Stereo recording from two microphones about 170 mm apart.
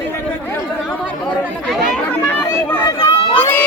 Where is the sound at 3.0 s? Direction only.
10° left (ahead or behind).